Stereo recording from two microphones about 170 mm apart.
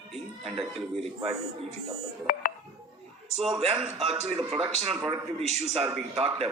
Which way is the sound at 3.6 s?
35° right (ahead or behind).